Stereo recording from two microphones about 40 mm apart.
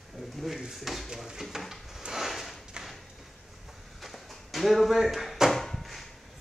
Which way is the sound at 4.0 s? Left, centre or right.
Centre.